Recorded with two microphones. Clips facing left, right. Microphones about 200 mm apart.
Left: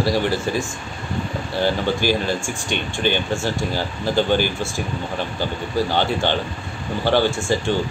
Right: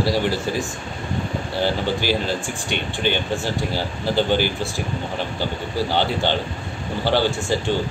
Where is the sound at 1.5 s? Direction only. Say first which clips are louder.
Left 2 dB; 15° left (ahead or behind).